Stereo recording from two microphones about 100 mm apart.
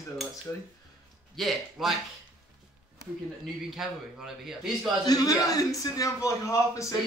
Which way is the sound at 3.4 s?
5° right (ahead or behind).